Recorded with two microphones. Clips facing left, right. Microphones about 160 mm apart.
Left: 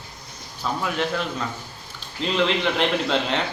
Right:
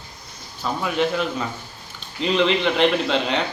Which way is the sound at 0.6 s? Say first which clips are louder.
Right 3 dB; centre (ahead or behind).